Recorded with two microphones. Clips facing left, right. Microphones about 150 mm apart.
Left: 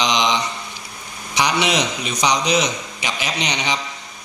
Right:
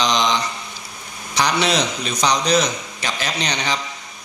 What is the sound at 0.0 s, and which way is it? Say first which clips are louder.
Mantra: even; 15° left (ahead or behind).